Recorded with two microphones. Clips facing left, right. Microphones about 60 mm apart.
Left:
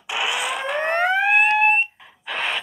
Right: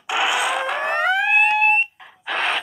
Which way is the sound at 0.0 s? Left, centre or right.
Centre.